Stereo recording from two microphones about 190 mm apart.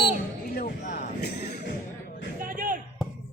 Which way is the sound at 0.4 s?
50° left (ahead or behind).